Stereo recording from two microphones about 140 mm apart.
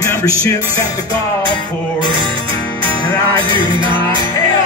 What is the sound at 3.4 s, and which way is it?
Music, 35° right (ahead or behind).